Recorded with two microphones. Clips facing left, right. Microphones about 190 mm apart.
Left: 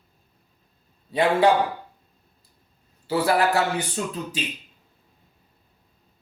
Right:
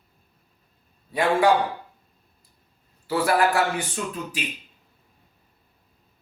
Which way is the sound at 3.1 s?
20° left (ahead or behind).